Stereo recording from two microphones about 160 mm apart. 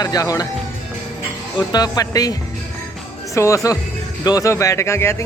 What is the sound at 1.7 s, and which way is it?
Speech, 25° left (ahead or behind).